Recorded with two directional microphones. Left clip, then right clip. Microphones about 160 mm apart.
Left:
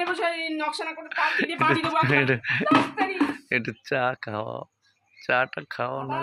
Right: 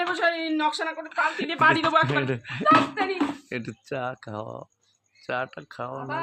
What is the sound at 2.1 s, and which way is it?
Speech, 5° left (ahead or behind).